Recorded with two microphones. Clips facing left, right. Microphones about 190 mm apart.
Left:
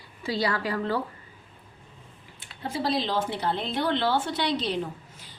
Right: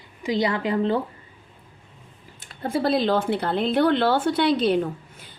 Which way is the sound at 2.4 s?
50° right (ahead or behind).